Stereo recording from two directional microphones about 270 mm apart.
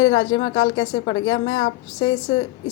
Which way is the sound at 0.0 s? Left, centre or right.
Left.